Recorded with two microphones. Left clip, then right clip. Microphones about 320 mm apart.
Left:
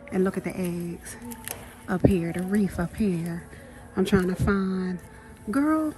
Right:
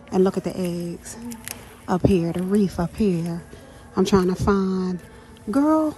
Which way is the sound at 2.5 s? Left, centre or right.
Centre.